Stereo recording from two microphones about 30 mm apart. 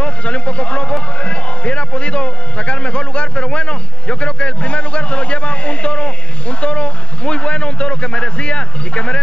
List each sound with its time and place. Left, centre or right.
0.0 s music: left